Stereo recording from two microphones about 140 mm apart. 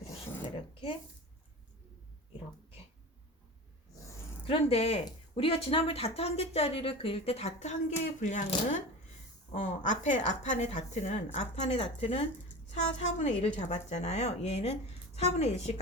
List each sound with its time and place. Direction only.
4.4 s a woman's voice: 45° left (ahead or behind)
12.7 s a woman's voice: 55° left (ahead or behind)